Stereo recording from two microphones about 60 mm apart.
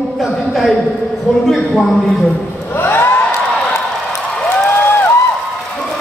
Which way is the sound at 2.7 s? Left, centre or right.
Left.